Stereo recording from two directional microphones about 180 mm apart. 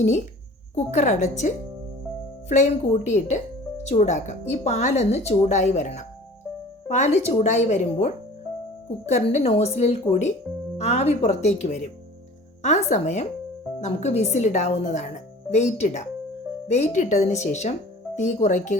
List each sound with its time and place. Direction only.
0.8 s a woman's voice: 40° left (ahead or behind)